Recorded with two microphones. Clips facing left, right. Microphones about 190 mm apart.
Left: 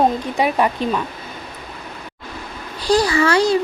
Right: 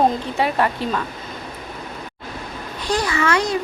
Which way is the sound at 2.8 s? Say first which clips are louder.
Left 6 dB; 35° left (ahead or behind).